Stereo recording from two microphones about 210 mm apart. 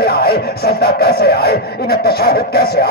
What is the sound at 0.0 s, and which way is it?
Speech, 50° left (ahead or behind).